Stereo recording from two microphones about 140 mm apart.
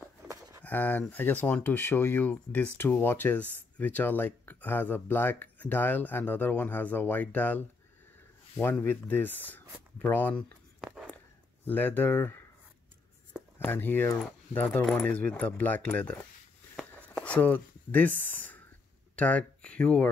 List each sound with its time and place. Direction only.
0.3 s a sound: 20° right (ahead or behind)
0.7 s speech: 10° left (ahead or behind)
11.6 s speech: 15° left (ahead or behind)
13.6 s speech: 15° left (ahead or behind)
16.9 s a sound: 10° left (ahead or behind)
19.1 s speech: 10° left (ahead or behind)